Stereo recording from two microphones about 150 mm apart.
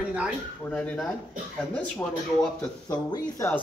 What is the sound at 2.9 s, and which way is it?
Speech, 25° left (ahead or behind).